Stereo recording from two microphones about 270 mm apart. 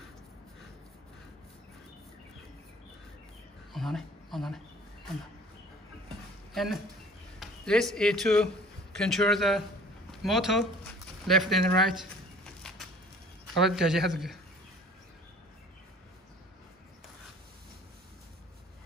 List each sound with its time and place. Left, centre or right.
3.7 s speech: centre
6.5 s speech: centre
13.7 s speech: centre